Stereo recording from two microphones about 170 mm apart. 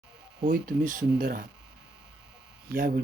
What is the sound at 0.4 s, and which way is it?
Speech, 60° right (ahead or behind).